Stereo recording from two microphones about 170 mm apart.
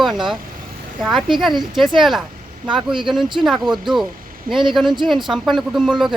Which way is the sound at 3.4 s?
Centre (ahead or behind).